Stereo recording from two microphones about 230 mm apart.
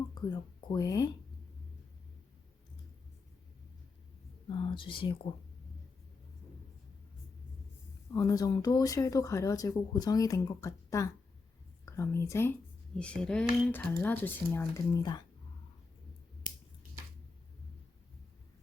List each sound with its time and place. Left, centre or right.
0.1 s speech: centre
4.4 s speech: left
8.1 s speech: centre